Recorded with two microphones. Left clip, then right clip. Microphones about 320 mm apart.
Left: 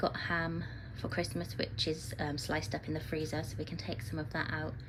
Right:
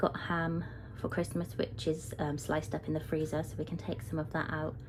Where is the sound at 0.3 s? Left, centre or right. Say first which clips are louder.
Even; right.